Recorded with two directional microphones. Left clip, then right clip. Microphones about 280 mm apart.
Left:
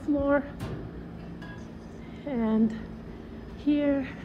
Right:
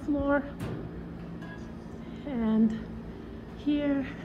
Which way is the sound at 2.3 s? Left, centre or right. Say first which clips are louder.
Left 1 dB; centre.